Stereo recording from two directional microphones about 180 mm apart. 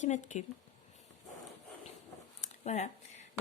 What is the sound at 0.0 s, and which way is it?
Speech, 40° left (ahead or behind).